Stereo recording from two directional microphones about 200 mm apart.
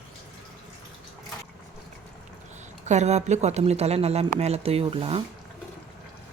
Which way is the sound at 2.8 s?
35° right (ahead or behind).